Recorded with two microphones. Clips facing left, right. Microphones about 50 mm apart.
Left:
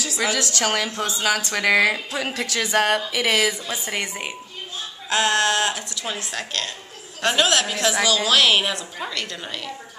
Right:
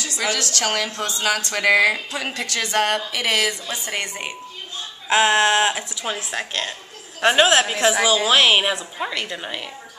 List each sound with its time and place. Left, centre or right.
0.0 s a woman's voice: centre
5.1 s a woman's voice: right